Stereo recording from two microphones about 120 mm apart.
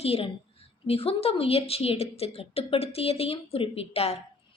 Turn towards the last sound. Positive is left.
turn(degrees=55)  # may be behind; listen again after turning